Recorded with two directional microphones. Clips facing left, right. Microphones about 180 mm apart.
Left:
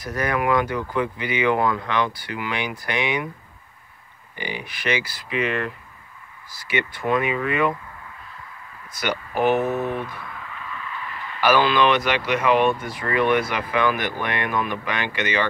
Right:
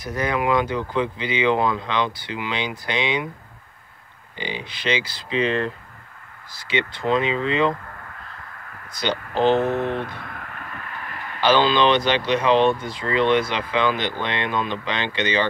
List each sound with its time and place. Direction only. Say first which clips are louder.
0.0 s speech: even; 20° right (ahead or behind)
4.4 s speech: right 1 dB; 20° right (ahead or behind)
6.7 s speech: right 1 dB; 25° right (ahead or behind)
9.3 s speech: right 2 dB; 25° right (ahead or behind)
9.8 s a sound: right 1 dB; 70° right (ahead or behind); by 11.3 s 50° right (ahead or behind)
11.4 s speech: right 1 dB; 25° right (ahead or behind)